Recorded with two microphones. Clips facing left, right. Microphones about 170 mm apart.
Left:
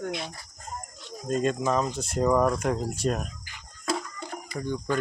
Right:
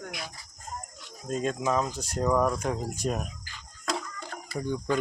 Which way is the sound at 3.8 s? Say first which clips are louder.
Left 3 dB; 10° left (ahead or behind).